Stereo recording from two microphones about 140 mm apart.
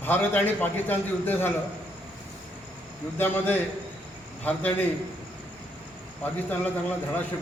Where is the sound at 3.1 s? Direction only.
15° left (ahead or behind).